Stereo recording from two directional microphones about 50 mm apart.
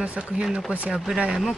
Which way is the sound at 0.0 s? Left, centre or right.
Centre.